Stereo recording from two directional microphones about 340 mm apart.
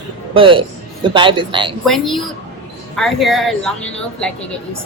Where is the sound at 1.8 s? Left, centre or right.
Centre.